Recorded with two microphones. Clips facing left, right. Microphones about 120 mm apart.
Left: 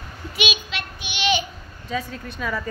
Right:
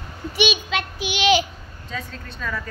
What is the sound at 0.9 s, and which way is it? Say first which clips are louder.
Child singing: right 4 dB; 90° right.